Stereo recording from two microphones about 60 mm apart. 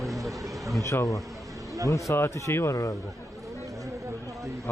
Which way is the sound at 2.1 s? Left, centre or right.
Left.